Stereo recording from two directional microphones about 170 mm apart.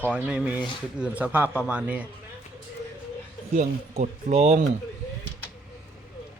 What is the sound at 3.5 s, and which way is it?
Speech, 45° right (ahead or behind).